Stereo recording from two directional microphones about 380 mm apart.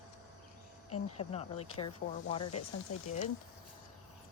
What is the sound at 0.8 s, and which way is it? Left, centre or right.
Speech, left.